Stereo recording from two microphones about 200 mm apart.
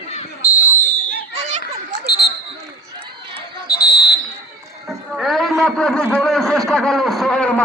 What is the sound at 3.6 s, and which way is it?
Basketball bounce, 55° left (ahead or behind).